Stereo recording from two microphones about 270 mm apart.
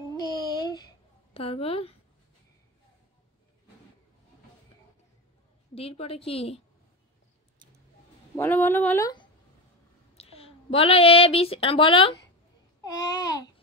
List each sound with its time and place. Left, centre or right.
0.2 s a sound: centre
5.8 s a woman's voice: left
8.4 s a woman's voice: centre